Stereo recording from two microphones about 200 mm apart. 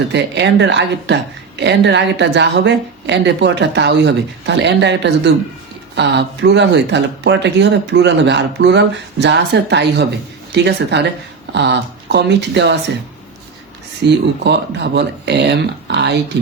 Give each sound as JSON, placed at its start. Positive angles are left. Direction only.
{"t": 0.1, "sound": "a woman's voice", "side_deg": -60}
{"t": 14.0, "sound": "a woman's voice", "side_deg": -55}